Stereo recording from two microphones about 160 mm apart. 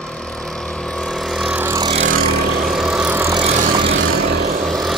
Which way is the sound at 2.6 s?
Centre (ahead or behind).